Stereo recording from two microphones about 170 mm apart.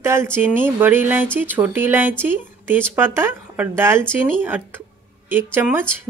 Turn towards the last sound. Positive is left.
turn(degrees=-10)  # may be behind; listen again after turning